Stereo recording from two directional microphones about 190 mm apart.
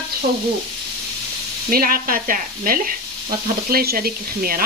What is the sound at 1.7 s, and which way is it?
Speech, 50° right (ahead or behind).